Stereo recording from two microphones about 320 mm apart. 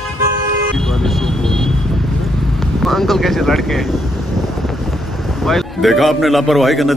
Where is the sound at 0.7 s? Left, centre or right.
Centre.